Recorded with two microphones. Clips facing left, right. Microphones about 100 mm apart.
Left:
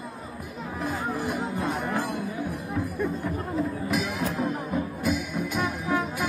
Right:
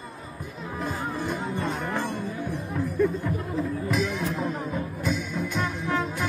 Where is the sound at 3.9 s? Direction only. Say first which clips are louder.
Right 1 dB; 5° left (ahead or behind).